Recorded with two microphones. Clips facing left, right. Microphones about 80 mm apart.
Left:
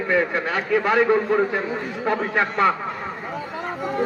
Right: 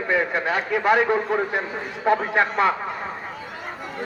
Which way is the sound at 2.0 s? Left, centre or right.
Right.